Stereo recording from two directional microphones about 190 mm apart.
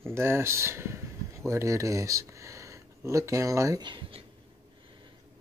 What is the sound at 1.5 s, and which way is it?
Speech, 15° right (ahead or behind).